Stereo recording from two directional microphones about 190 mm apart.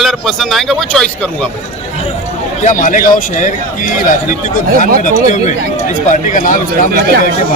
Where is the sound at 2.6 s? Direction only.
45° left (ahead or behind).